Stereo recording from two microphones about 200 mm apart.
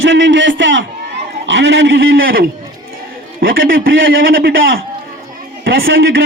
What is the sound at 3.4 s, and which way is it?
A man's voice, 50° right (ahead or behind).